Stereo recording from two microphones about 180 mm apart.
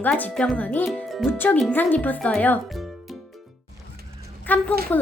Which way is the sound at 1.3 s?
10° left (ahead or behind).